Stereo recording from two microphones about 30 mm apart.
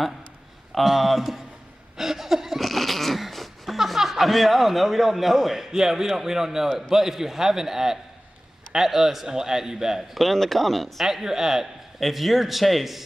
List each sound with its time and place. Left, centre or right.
0.7 s speech: centre
2.0 s a sound: centre
2.6 s cat: centre
3.7 s speech: centre
10.1 s a man's voice: centre
11.1 s speech: centre
12.0 s a man's voice: centre